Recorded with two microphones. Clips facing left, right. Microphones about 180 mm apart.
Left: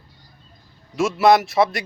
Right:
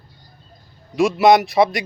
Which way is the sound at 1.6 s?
10° right (ahead or behind).